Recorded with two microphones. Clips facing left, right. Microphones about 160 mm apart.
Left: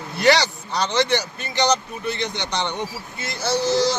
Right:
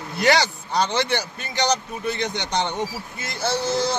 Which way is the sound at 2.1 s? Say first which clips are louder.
Right 2 dB; 50° right (ahead or behind).